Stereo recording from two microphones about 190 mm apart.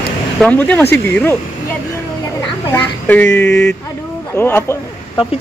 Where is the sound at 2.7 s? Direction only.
10° left (ahead or behind).